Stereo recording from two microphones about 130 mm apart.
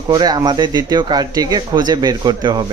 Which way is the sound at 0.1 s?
30° right (ahead or behind).